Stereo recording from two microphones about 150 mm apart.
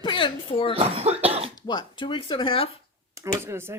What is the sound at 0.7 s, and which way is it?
Cough, 40° right (ahead or behind).